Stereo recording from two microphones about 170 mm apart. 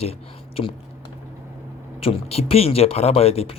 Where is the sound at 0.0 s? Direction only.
35° left (ahead or behind).